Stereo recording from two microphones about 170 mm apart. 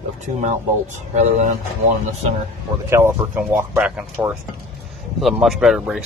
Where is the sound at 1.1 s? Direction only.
40° right (ahead or behind).